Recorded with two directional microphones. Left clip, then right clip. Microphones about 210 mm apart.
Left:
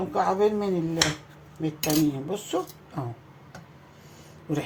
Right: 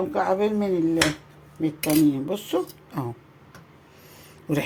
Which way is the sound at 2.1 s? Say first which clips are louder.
Right 3 dB; 50° right (ahead or behind).